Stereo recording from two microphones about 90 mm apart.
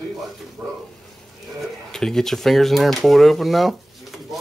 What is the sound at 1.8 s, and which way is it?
Speech, 5° left (ahead or behind).